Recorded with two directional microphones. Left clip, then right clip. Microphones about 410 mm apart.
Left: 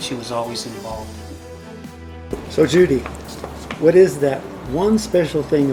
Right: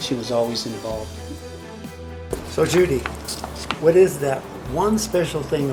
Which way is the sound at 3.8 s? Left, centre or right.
Right.